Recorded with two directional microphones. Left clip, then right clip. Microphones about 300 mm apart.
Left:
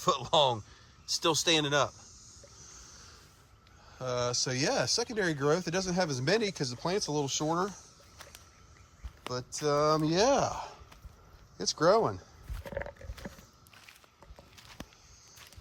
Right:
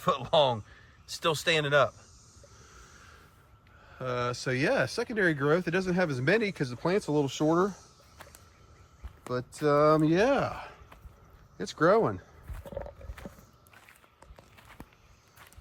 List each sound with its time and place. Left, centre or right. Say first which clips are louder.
0.0 s speech: right 1 dB; centre
3.9 s speech: even; centre
9.2 s speech: right 4 dB; centre
11.5 s a sound: right 1 dB; centre
12.6 s wild animals: left 1 dB; centre
13.2 s a sound: even; centre